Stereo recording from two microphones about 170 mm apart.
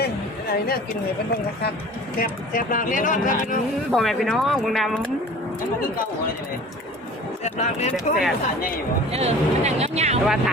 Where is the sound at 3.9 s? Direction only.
Centre (ahead or behind).